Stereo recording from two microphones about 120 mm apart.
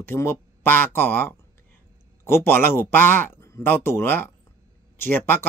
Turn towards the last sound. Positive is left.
turn(degrees=15)  # may be behind; listen again after turning